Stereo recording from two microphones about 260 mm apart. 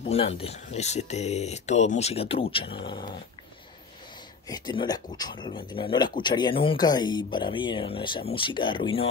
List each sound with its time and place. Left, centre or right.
0.0 s speech: left
4.5 s speech: centre